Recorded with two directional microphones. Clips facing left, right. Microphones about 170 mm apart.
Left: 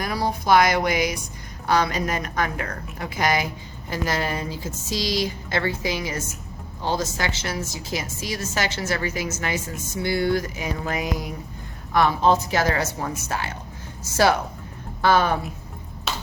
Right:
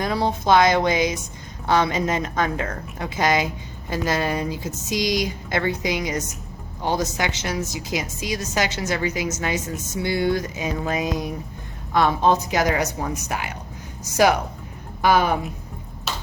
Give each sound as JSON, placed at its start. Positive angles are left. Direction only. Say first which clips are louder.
{"t": 0.0, "sound": "a woman's voice", "louder": "right 3 dB", "side_deg": -25}
{"t": 15.0, "sound": "a woman's voice", "louder": "right 1 dB", "side_deg": -15}